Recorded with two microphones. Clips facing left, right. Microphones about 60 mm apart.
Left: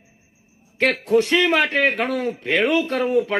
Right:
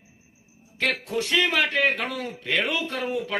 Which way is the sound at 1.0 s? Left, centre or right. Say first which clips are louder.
Left 9 dB; left.